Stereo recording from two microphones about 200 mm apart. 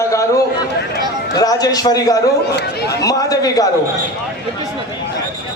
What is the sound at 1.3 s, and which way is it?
Speech, 20° left (ahead or behind).